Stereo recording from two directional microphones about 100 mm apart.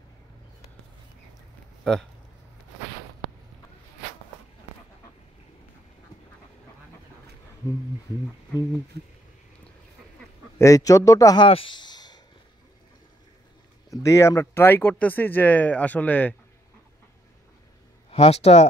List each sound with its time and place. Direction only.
1.9 s speech: 5° left (ahead or behind)
10.6 s a man's voice: 35° left (ahead or behind)
11.3 s speech: 60° left (ahead or behind); by 12.2 s 45° left (ahead or behind)
13.8 s speech: 30° left (ahead or behind); by 16.3 s 15° left (ahead or behind)
18.1 s speech: 90° left